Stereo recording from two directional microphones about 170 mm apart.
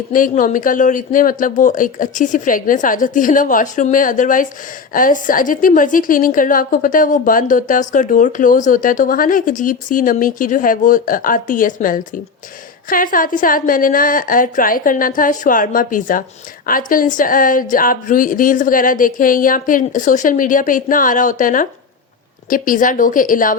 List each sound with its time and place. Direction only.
0.1 s a woman's voice: 50° left (ahead or behind)